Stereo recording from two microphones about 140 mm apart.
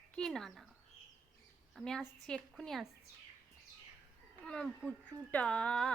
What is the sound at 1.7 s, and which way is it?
A woman's voice, 5° left (ahead or behind).